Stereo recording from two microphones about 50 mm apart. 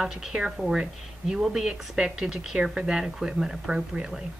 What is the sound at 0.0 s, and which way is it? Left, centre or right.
Speech, centre.